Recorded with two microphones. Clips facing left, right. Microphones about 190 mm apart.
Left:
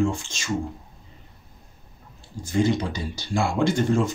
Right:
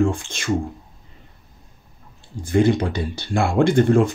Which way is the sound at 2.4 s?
55° right (ahead or behind).